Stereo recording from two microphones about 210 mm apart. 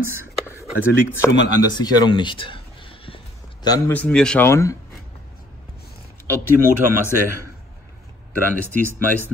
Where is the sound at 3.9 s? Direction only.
5° left (ahead or behind).